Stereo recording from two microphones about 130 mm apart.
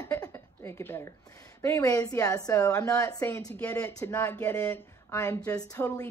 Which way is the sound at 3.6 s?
10° left (ahead or behind).